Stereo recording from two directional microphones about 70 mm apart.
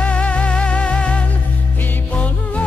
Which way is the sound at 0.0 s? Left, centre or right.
Centre.